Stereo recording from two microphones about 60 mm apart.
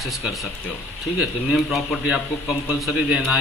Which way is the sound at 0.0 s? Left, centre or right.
Centre.